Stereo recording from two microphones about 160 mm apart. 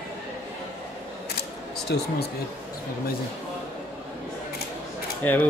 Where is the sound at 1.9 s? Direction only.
90° left.